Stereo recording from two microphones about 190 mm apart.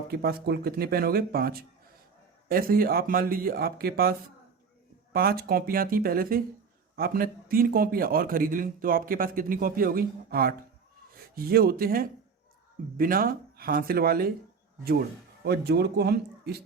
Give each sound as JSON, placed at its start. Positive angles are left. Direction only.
{"t": 0.1, "sound": "a man's voice", "side_deg": -55}
{"t": 5.1, "sound": "a man's voice", "side_deg": -50}
{"t": 15.4, "sound": "speech", "side_deg": -60}